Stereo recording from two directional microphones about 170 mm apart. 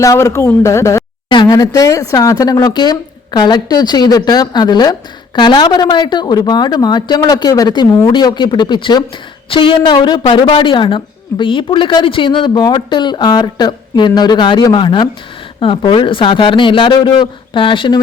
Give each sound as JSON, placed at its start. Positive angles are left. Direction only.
{"t": 0.0, "sound": "speech", "side_deg": 20}